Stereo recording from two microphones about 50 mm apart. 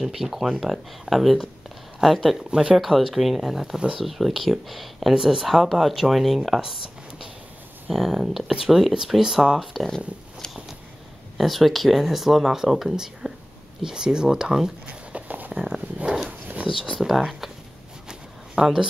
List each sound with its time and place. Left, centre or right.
0.0 s speech: centre
2.5 s speech: centre
2.8 s speech: centre
7.9 s speech: centre
9.6 s speech: centre
11.3 s speech: centre
15.1 s a sound: right
15.5 s speech: centre
16.7 s speech: centre
18.0 s a sound: centre